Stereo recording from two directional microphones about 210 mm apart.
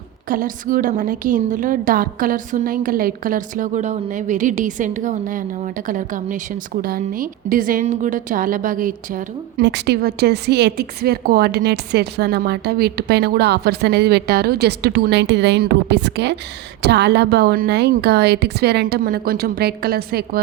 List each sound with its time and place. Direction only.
0.3 s a woman's voice: 40° right (ahead or behind)
9.6 s a woman's voice: 55° right (ahead or behind)